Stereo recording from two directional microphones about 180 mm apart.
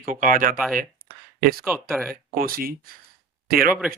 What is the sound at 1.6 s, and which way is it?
Speech, centre (ahead or behind).